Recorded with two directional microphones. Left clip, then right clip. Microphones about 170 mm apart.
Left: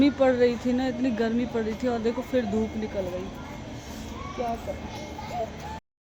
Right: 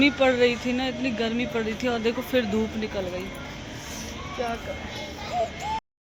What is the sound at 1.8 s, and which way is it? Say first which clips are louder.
Speech: right 2 dB; 15° left (ahead or behind).